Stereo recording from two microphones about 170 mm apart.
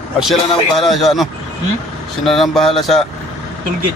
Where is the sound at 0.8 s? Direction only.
Centre (ahead or behind).